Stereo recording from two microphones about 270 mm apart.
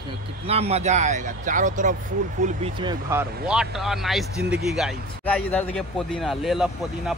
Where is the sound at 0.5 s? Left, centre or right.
Right.